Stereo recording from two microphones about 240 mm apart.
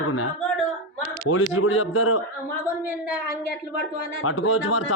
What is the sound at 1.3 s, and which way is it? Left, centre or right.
Speech, left.